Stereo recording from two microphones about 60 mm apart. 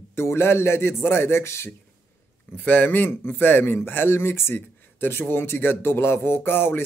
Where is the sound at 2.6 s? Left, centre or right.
Left.